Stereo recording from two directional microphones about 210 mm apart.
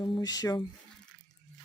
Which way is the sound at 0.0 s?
20° left (ahead or behind).